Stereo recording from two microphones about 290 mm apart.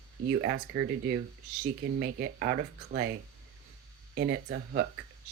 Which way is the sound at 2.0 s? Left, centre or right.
Right.